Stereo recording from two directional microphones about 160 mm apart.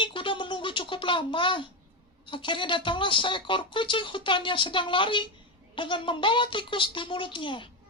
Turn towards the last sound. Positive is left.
turn(degrees=30)  # may be behind; listen again after turning